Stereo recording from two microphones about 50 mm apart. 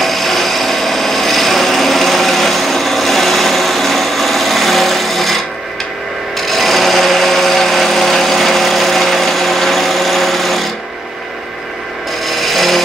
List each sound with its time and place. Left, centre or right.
0.0 s wood: centre
6.3 s tools: centre
12.3 s rub: centre